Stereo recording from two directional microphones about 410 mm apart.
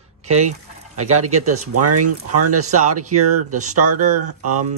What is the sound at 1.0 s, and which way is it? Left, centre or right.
Speech, right.